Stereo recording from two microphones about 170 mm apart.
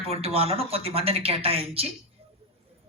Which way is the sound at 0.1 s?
35° right (ahead or behind).